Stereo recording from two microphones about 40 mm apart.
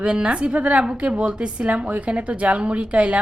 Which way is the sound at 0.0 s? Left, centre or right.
Right.